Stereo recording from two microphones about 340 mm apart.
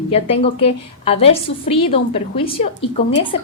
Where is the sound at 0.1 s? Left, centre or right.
Centre.